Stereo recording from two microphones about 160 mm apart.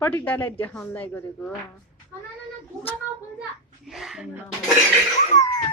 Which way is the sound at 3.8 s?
Centre (ahead or behind).